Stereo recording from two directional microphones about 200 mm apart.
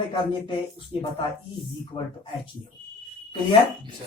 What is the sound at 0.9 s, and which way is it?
Speech, 25° left (ahead or behind).